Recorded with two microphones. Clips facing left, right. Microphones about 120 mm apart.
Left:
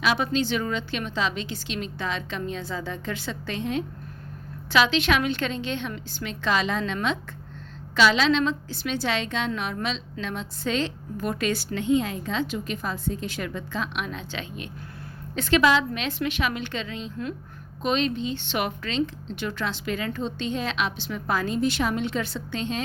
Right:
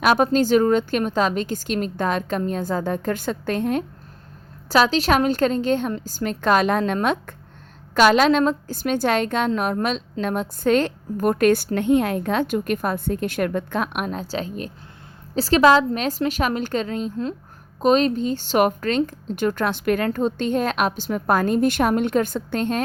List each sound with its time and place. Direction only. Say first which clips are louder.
0.0 s a woman's voice: right 7 dB; 50° right (ahead or behind)